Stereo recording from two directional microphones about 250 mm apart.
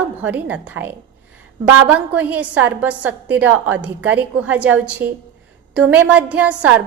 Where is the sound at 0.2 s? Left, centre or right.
Centre.